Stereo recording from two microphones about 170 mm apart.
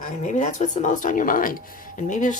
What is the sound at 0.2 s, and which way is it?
Speech, 45° left (ahead or behind).